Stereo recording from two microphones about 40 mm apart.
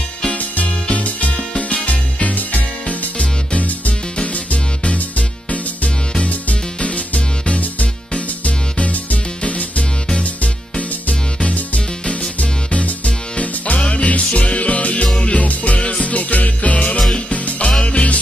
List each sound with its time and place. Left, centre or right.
0.2 s music: left
6.8 s music: left
11.1 s music: left
15.4 s music: left
17.6 s music: left